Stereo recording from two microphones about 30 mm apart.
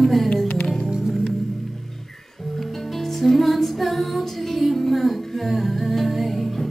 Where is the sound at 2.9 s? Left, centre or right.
Centre.